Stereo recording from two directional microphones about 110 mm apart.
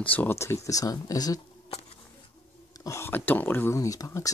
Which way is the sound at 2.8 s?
25° left (ahead or behind).